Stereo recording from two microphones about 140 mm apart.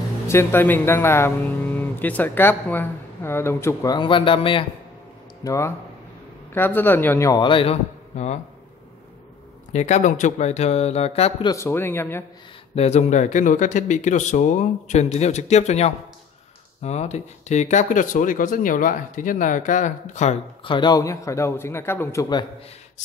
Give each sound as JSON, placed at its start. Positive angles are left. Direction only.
{"t": 0.3, "sound": "speech", "side_deg": 15}
{"t": 3.9, "sound": "speech", "side_deg": 35}
{"t": 5.4, "sound": "a man's voice", "side_deg": 20}
{"t": 7.4, "sound": "speech", "side_deg": 40}
{"t": 9.7, "sound": "speech", "side_deg": 55}
{"t": 11.4, "sound": "speech", "side_deg": 20}
{"t": 12.7, "sound": "speech", "side_deg": 50}
{"t": 20.6, "sound": "a man's voice", "side_deg": 35}